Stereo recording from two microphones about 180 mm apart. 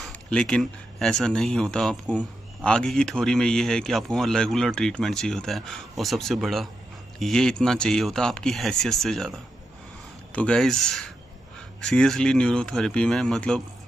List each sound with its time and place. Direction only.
0.0 s speech: 5° left (ahead or behind)